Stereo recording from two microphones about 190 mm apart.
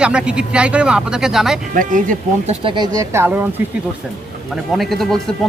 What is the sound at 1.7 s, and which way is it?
Speech, 45° right (ahead or behind).